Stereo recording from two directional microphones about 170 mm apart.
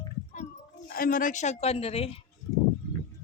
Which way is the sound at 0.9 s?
60° left (ahead or behind).